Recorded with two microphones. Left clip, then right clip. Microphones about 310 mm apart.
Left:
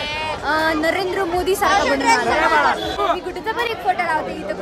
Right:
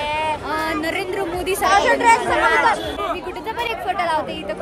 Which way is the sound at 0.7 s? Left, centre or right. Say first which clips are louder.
Left 4 dB; left.